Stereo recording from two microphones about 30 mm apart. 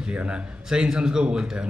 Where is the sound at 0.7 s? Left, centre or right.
Right.